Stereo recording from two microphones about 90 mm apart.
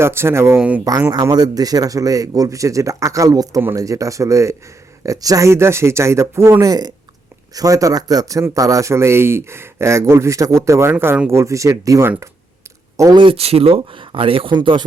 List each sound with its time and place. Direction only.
0.0 s speech: 30° right (ahead or behind)
1.1 s a man's voice: 45° right (ahead or behind); by 6.7 s 30° right (ahead or behind)
6.7 s a man's voice: 45° right (ahead or behind)
13.1 s speech: 80° right; by 14.8 s 60° right (ahead or behind)